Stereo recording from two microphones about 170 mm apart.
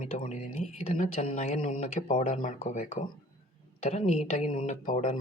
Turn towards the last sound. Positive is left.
turn(degrees=50)  # may be behind; listen again after turning